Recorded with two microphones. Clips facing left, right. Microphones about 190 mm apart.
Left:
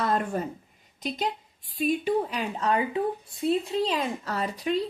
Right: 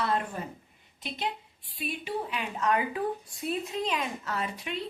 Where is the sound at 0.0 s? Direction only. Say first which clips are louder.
Left 4 dB; 45° left (ahead or behind).